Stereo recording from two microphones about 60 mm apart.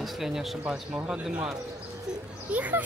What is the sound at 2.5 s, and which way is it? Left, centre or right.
Speech, right.